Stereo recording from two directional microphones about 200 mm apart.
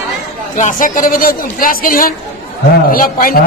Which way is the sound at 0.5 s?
40° left (ahead or behind).